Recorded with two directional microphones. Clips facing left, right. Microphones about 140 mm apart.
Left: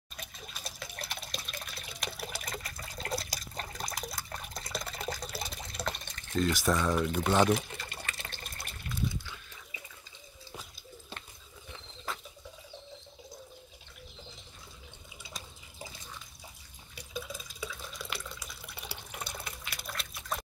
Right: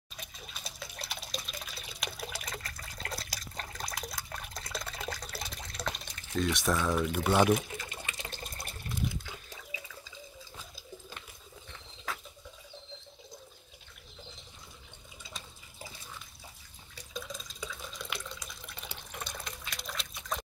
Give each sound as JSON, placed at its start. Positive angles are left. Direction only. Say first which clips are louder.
{"t": 0.5, "sound": "water", "louder": "left 1 dB", "side_deg": 0}
{"t": 5.9, "sound": "speech", "louder": "left 2 dB", "side_deg": 0}
{"t": 8.0, "sound": "water", "louder": "right 1 dB", "side_deg": -15}
{"t": 16.9, "sound": "drip", "louder": "left 1 dB", "side_deg": 10}
{"t": 17.8, "sound": "water", "louder": "even", "side_deg": 5}